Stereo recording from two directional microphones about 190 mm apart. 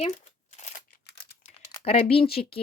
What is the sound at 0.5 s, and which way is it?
Scissors, 40° left (ahead or behind).